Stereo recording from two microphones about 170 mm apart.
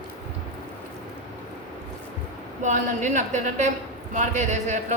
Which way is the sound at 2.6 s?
45° right (ahead or behind).